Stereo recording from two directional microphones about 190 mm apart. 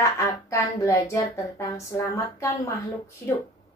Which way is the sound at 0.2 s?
15° left (ahead or behind).